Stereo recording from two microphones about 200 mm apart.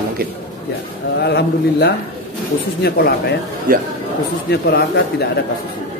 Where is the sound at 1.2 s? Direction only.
55° left (ahead or behind).